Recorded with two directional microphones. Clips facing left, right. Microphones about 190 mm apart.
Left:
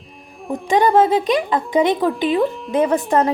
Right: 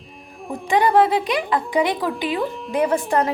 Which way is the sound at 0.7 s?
20° left (ahead or behind).